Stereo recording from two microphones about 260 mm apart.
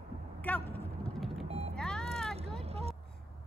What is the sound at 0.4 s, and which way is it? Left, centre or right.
Vehicle, centre.